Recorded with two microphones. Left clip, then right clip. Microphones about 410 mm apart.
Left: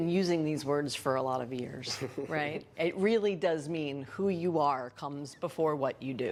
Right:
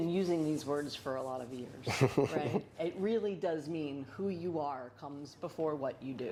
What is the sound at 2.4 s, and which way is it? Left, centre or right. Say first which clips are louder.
Speech: left 3 dB; left.